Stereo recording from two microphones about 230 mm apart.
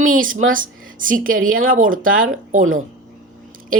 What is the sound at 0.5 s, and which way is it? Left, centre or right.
Speech, right.